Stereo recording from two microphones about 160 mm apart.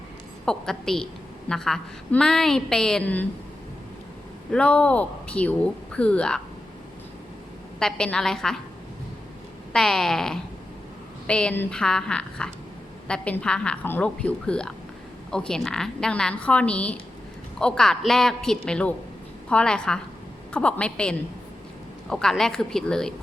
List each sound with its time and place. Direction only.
0.4 s a woman's voice: 5° left (ahead or behind)
4.5 s speech: 10° left (ahead or behind)
7.8 s a woman's voice: 5° left (ahead or behind)
9.7 s a woman's voice: 5° left (ahead or behind)